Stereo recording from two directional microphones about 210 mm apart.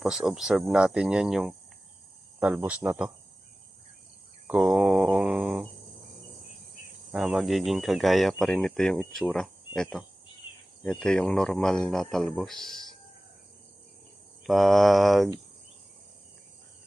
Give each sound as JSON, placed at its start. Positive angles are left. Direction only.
{"t": 0.0, "sound": "speech", "side_deg": 0}
{"t": 4.4, "sound": "speech", "side_deg": -5}
{"t": 7.1, "sound": "speech", "side_deg": 0}
{"t": 11.0, "sound": "speech", "side_deg": 5}
{"t": 14.4, "sound": "speech", "side_deg": 0}